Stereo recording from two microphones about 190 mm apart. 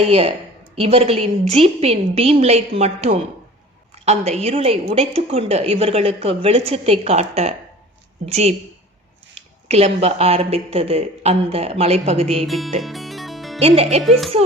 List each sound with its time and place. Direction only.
0.0 s a woman's voice: 35° right (ahead or behind)
9.6 s a woman's voice: 35° right (ahead or behind)
12.4 s a child's voice: centre (ahead or behind)
12.8 s music: centre (ahead or behind)
13.6 s a woman's voice: 35° right (ahead or behind)
14.0 s a child's voice: centre (ahead or behind)